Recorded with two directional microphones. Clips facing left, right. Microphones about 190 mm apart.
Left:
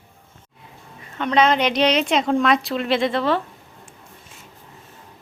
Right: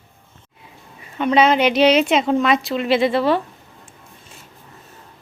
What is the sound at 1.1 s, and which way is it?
A woman's voice, 10° right (ahead or behind).